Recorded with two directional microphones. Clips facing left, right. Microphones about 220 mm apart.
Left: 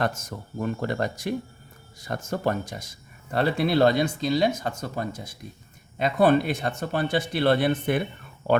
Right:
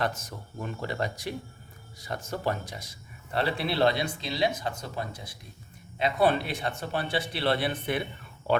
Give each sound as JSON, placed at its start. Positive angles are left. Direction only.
{"t": 0.0, "sound": "speech", "side_deg": 45}